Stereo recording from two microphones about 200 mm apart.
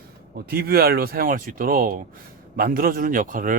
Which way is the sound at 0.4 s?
50° right (ahead or behind).